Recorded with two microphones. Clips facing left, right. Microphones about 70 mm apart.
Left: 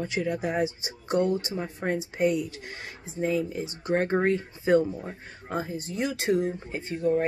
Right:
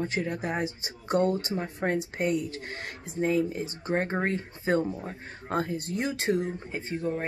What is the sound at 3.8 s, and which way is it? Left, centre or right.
Speech, right.